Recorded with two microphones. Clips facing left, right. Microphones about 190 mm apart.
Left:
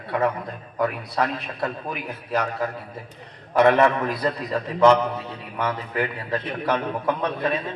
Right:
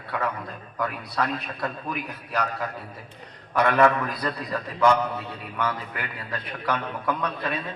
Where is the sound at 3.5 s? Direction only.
25° left (ahead or behind).